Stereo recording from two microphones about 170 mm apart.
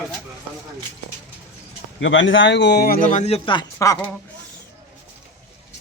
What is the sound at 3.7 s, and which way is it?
Speech, 20° left (ahead or behind).